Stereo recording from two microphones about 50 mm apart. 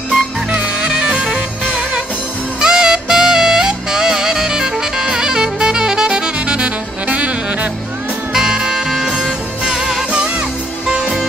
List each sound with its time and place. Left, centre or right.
0.5 s music: right
8.3 s music: centre